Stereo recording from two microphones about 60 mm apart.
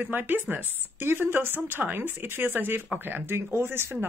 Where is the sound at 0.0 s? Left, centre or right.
Right.